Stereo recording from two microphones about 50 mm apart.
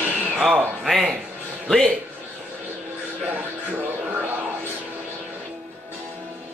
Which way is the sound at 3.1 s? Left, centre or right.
Right.